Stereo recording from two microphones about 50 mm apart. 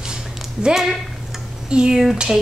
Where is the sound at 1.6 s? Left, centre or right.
Centre.